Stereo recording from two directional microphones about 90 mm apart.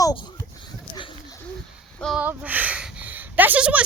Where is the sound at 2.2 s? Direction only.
20° right (ahead or behind).